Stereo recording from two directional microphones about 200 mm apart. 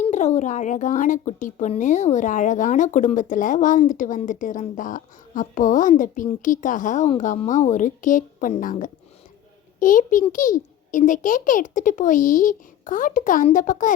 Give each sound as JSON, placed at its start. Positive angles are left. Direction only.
{"t": 0.1, "sound": "speech", "side_deg": 35}